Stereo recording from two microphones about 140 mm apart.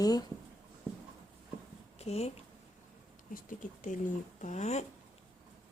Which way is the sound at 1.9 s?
50° left (ahead or behind).